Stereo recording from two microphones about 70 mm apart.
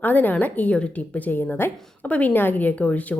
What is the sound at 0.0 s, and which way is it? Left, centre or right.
Speech, left.